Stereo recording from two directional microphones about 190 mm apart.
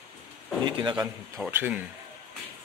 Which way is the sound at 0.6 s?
25° right (ahead or behind).